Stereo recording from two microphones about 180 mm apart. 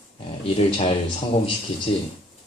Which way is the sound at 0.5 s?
35° left (ahead or behind).